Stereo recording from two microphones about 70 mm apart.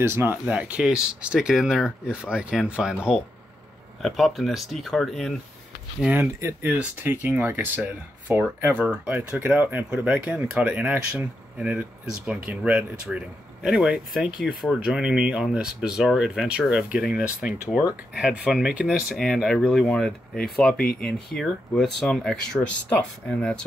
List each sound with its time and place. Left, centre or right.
0.0 s speech: right
0.5 s speech: centre
4.0 s speech: centre
6.6 s speech: right
8.8 s speech: centre
13.7 s speech: centre
19.3 s speech: centre
22.6 s speech: centre